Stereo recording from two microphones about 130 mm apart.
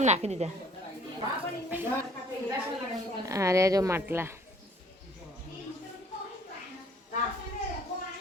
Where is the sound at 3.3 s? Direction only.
25° right (ahead or behind).